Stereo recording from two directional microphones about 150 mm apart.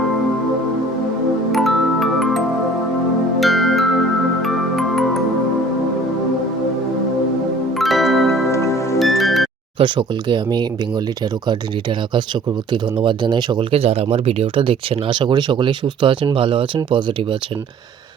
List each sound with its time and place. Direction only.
1.5 s music: centre (ahead or behind)
3.4 s music: centre (ahead or behind)
7.8 s music: centre (ahead or behind)
8.4 s music: 20° left (ahead or behind)
9.0 s music: centre (ahead or behind)
9.7 s speech: 35° right (ahead or behind)